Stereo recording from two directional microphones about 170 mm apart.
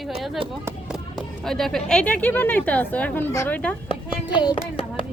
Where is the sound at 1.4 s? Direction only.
Centre (ahead or behind).